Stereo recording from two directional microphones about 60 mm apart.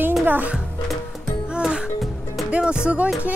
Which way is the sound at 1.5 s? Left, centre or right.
Centre.